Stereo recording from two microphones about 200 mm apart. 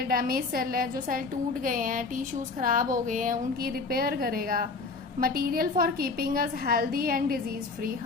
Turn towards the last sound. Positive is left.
turn(degrees=-45)  # may be behind; listen again after turning